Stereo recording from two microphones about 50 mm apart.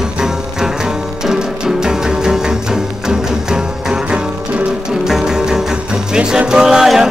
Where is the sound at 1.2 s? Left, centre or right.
Centre.